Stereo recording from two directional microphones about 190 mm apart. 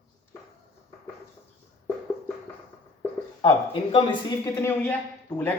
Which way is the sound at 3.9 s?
25° left (ahead or behind).